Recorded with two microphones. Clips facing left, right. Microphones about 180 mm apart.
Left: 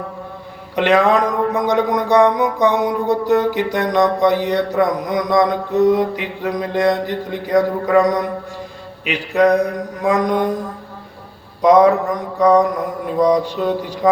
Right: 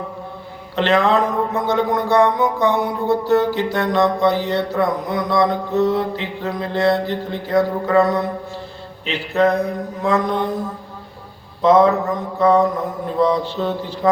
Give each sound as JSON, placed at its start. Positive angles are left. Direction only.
{"t": 0.8, "sound": "speech", "side_deg": 15}
{"t": 11.6, "sound": "speech", "side_deg": 15}